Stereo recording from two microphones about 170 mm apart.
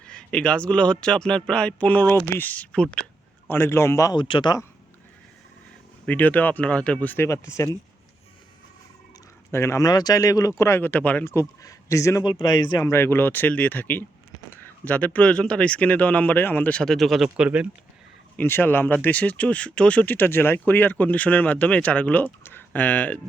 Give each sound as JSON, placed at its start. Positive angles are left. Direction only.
{"t": 0.0, "sound": "a man's voice", "side_deg": 5}
{"t": 6.1, "sound": "a man's voice", "side_deg": 10}
{"t": 9.5, "sound": "a man's voice", "side_deg": 15}
{"t": 18.3, "sound": "a man's voice", "side_deg": 10}